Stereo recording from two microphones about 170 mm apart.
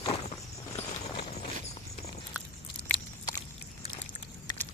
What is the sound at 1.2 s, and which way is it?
Clip-clop, 40° left (ahead or behind).